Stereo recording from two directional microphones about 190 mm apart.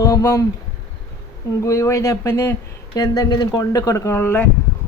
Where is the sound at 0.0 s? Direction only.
15° left (ahead or behind).